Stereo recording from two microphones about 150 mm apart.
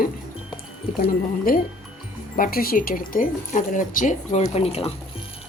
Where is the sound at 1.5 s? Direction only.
70° left (ahead or behind); by 4.9 s 45° left (ahead or behind).